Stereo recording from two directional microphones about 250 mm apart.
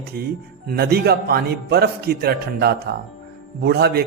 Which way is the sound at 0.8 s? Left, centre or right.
Right.